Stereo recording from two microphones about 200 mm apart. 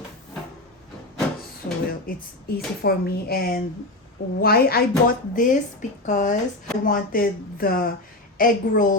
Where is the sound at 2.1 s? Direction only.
45° left (ahead or behind).